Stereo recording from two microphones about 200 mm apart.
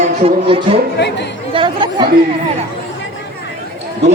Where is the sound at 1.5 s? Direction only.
25° right (ahead or behind).